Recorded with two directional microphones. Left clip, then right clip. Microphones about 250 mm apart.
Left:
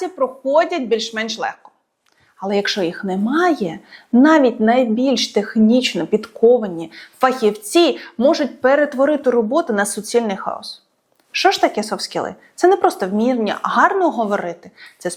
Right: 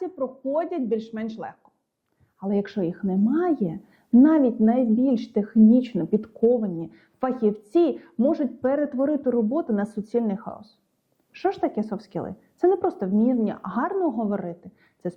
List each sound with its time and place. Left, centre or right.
0.1 s a woman's voice: centre